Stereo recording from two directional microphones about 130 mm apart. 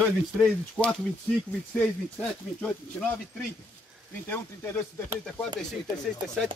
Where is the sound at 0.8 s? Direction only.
10° left (ahead or behind).